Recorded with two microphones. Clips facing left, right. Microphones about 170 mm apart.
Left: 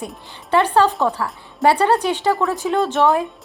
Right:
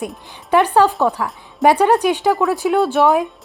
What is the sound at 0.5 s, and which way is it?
Speech, 10° right (ahead or behind).